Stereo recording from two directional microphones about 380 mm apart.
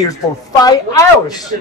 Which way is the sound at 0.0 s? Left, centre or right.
Centre.